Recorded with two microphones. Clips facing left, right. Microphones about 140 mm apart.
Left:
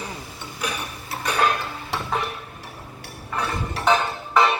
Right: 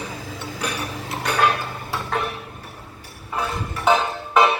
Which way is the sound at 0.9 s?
90° right.